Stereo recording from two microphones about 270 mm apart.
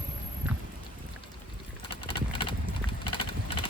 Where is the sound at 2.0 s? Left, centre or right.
Centre.